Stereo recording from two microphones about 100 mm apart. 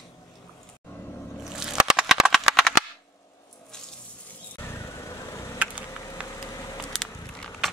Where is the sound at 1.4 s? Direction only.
5° right (ahead or behind).